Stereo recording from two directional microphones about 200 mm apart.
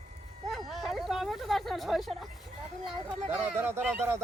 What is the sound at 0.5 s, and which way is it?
Hubbub, centre (ahead or behind).